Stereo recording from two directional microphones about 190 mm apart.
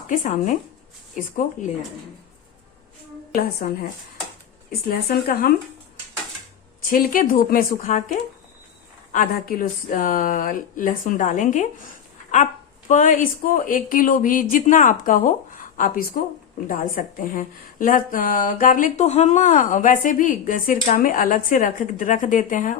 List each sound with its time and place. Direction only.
0.1 s a woman's voice: 45° left (ahead or behind)
3.3 s a woman's voice: 50° left (ahead or behind)
4.9 s a woman's voice: 50° left (ahead or behind)
6.9 s a woman's voice: 50° left (ahead or behind)
9.1 s a woman's voice: 50° left (ahead or behind)
12.9 s a woman's voice: 45° left (ahead or behind)